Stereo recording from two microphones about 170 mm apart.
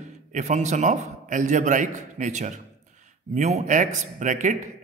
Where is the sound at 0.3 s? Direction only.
45° right (ahead or behind).